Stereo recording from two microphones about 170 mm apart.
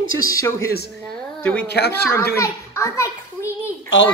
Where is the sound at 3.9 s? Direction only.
90° left.